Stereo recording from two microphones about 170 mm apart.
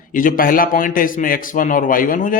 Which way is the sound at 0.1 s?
55° left (ahead or behind).